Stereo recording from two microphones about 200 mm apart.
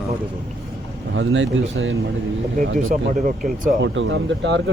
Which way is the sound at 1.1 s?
70° right (ahead or behind).